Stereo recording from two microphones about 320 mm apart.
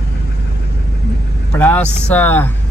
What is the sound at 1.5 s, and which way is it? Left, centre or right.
Speech, centre.